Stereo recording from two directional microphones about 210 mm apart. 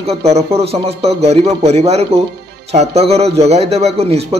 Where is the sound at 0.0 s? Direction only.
30° right (ahead or behind).